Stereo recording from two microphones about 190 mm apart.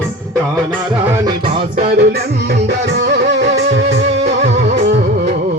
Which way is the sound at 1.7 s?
50° right (ahead or behind).